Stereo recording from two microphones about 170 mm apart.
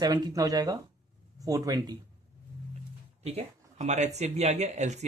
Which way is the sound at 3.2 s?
40° right (ahead or behind).